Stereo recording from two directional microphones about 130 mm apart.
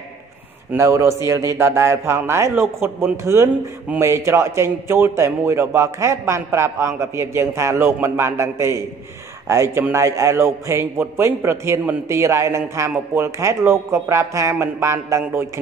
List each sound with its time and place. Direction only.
0.7 s a man's voice: 20° right (ahead or behind)